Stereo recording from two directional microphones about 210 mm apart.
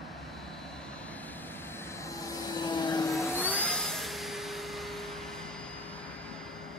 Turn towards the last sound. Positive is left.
turn(degrees=0)  # may be behind; listen again after turning